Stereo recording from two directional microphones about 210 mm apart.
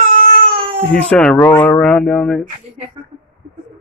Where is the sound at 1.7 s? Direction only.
5° left (ahead or behind).